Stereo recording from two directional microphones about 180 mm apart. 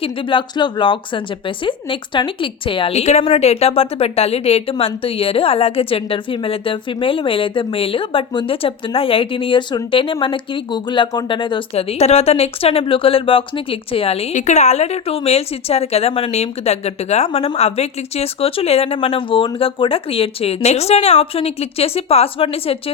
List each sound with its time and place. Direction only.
0.0 s a woman's voice: 30° left (ahead or behind)